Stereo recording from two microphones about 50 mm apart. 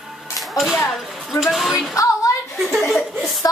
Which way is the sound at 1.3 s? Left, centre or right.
Centre.